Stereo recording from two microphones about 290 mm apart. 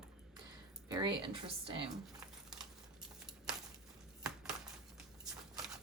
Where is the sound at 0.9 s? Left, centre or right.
Centre.